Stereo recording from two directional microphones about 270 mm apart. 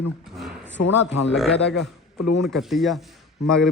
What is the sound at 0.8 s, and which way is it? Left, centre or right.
Speech, left.